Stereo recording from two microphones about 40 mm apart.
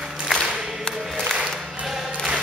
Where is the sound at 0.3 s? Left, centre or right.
Centre.